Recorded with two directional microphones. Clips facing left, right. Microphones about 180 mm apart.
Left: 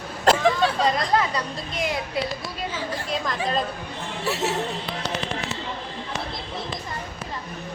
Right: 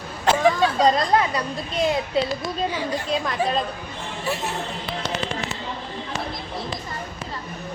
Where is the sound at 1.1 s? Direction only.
20° right (ahead or behind).